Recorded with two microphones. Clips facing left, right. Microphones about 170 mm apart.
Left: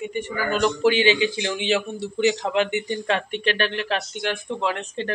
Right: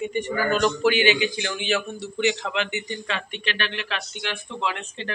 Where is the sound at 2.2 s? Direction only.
40° left (ahead or behind).